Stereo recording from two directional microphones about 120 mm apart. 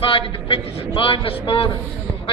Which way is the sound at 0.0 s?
50° left (ahead or behind).